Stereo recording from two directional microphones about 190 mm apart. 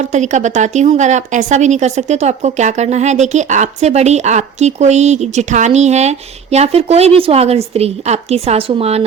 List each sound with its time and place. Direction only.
0.0 s a woman's voice: 40° right (ahead or behind)